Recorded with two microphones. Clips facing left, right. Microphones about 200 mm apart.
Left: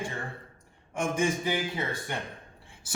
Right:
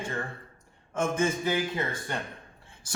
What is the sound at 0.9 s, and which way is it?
Speech, 15° left (ahead or behind).